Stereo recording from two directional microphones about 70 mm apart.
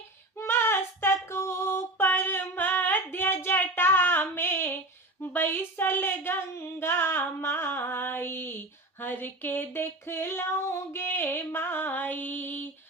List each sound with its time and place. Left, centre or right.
0.3 s female singing: left